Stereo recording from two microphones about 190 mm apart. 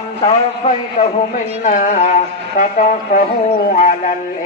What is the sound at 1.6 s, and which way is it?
Speech, 40° left (ahead or behind).